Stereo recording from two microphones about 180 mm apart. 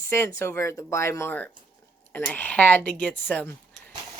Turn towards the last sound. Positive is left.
turn(degrees=10)  # may be behind; listen again after turning